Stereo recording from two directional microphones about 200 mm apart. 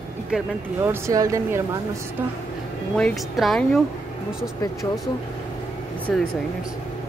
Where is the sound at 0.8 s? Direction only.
15° right (ahead or behind).